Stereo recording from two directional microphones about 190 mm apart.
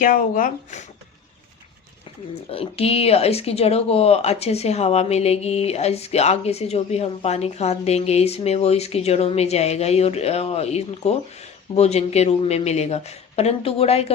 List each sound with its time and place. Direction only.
0.0 s speech: 45° left (ahead or behind)
2.5 s speech: 30° left (ahead or behind)